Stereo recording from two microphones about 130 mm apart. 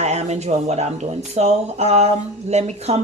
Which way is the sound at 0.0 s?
55° right (ahead or behind).